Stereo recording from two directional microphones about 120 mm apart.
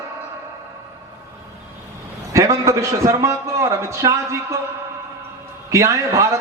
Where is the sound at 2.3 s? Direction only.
25° right (ahead or behind).